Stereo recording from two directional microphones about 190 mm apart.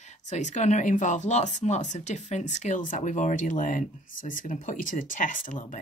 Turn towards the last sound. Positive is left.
turn(degrees=45)  # may be behind; listen again after turning